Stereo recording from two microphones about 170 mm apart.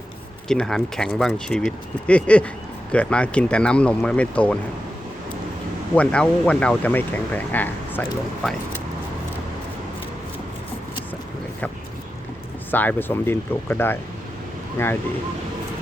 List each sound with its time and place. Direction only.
0.4 s speech: 5° left (ahead or behind)
5.9 s speech: 5° left (ahead or behind)
12.7 s speech: 10° left (ahead or behind)